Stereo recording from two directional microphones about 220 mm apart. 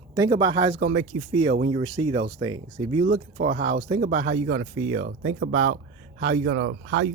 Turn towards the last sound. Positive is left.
turn(degrees=-55)  # may be behind; listen again after turning